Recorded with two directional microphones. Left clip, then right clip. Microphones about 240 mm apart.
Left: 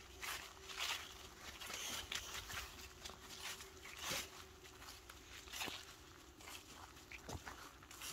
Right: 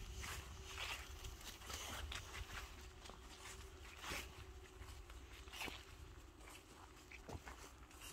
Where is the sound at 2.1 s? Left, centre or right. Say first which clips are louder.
Left 5 dB; centre.